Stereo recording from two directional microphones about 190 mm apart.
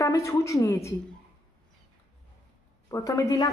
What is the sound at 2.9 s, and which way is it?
Speech, 15° left (ahead or behind).